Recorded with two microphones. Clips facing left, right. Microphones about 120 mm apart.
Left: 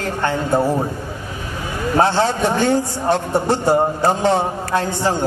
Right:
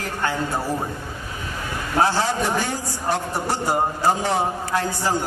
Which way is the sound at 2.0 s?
25° left (ahead or behind).